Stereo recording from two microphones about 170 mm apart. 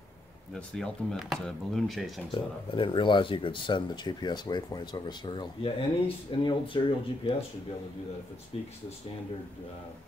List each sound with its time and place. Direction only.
0.6 s speech: 5° left (ahead or behind)
2.3 s speech: 30° left (ahead or behind)
8.5 s speech: 35° left (ahead or behind)